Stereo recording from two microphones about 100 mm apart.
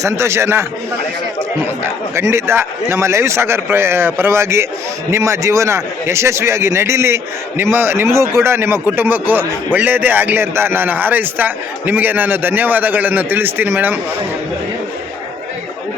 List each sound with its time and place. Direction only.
0.0 s a man's voice: 25° right (ahead or behind)
2.1 s a man's voice: 25° right (ahead or behind)